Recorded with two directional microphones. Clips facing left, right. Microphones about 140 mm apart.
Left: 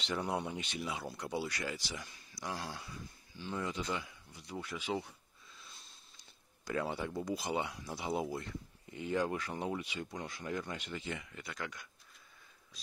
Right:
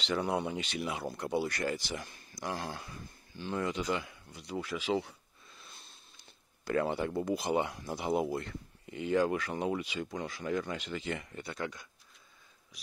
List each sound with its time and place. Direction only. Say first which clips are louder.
0.0 s speech: right 4 dB; 90° right
5.5 s speech: right 2 dB; 55° right (ahead or behind); by 11.1 s 90° right
11.3 s speech: right 5 dB; 30° right (ahead or behind)